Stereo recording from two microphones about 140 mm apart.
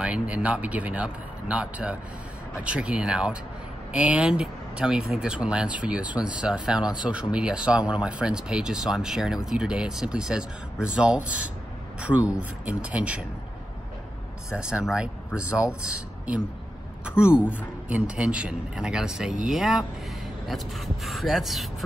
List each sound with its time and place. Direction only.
0.0 s speech: 10° right (ahead or behind)
14.5 s speech: 5° right (ahead or behind)
17.2 s speech: 5° right (ahead or behind)